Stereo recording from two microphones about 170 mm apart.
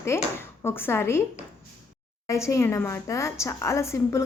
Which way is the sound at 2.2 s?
15° left (ahead or behind).